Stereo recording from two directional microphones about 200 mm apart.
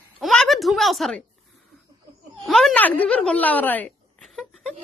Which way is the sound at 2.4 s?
Centre (ahead or behind).